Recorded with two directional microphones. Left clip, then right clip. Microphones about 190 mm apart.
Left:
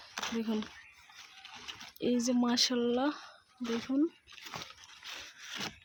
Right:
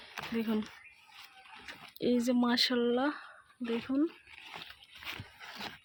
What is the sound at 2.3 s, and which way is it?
Speech, centre (ahead or behind).